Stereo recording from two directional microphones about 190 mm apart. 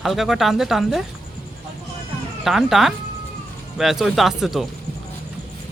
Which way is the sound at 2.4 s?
Centre (ahead or behind).